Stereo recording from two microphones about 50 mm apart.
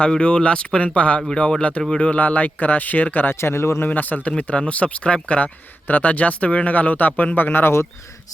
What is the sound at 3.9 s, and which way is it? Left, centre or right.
Speech, left.